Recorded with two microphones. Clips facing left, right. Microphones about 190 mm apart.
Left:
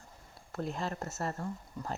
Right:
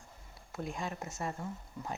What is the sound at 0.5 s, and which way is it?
Speech, centre (ahead or behind).